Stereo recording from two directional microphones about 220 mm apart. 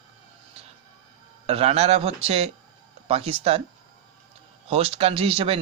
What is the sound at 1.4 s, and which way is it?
Speech, 25° right (ahead or behind).